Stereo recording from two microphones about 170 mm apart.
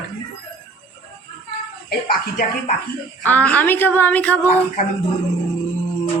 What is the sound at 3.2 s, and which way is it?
Speech, 10° left (ahead or behind).